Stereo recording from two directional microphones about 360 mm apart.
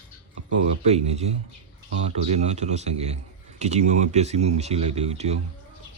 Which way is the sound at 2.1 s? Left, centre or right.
Centre.